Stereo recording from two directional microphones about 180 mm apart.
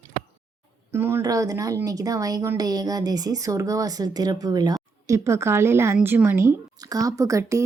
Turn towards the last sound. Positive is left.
turn(degrees=-15)  # may be behind; listen again after turning